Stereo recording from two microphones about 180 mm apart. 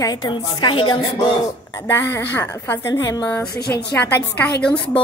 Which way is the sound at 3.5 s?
60° left (ahead or behind).